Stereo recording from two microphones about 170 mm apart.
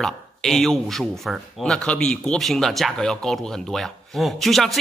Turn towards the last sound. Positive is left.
turn(degrees=0)  # may be behind; listen again after turning